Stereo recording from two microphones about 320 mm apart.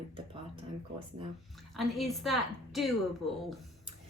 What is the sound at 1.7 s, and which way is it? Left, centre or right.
A woman's voice, centre.